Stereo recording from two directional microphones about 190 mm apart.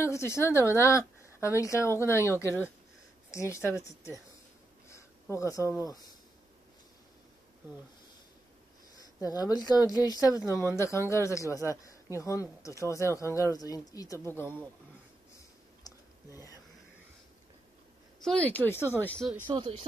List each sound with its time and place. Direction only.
0.0 s speech: 15° left (ahead or behind)
3.3 s speech: 15° left (ahead or behind)
4.8 s a sound: 15° left (ahead or behind)
9.2 s speech: 20° left (ahead or behind)
15.8 s a sound: 20° left (ahead or behind)
18.2 s speech: 5° left (ahead or behind)
19.4 s speech: 20° right (ahead or behind)